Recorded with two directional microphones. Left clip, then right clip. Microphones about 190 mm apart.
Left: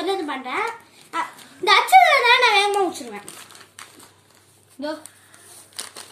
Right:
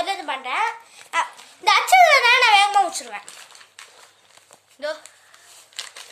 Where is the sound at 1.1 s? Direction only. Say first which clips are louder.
Right 3 dB; 45° right (ahead or behind).